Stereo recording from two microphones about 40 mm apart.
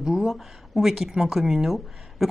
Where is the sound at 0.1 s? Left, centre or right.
Centre.